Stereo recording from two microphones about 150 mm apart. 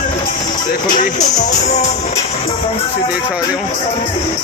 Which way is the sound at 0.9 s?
55° left (ahead or behind).